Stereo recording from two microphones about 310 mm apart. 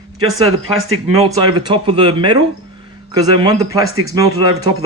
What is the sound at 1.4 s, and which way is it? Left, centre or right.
A man's voice, centre.